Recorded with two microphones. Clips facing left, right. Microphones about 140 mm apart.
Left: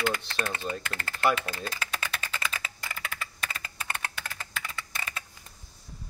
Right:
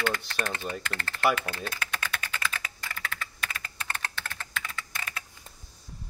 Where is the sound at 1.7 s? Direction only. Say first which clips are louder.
Even; 5° left (ahead or behind).